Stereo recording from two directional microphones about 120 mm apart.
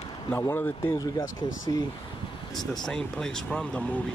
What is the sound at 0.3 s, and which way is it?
Speech, 15° left (ahead or behind).